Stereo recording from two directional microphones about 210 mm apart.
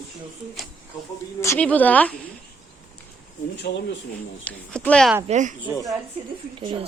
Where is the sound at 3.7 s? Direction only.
50° left (ahead or behind).